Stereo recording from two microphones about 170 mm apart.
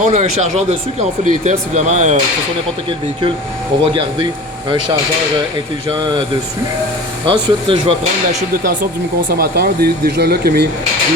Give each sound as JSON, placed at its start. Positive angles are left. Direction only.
{"t": 0.0, "sound": "speech", "side_deg": -40}
{"t": 7.3, "sound": "speech", "side_deg": -30}
{"t": 9.3, "sound": "speech", "side_deg": -65}